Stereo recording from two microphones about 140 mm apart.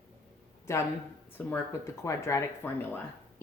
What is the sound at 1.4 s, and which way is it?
Speech, 10° left (ahead or behind).